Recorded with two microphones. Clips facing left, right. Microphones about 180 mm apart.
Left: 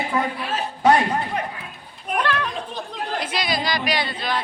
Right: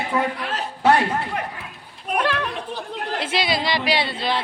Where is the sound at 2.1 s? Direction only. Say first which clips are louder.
Right 1 dB; 5° right (ahead or behind).